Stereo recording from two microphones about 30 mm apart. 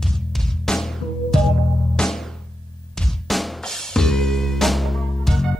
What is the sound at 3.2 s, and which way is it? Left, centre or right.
Drum, centre.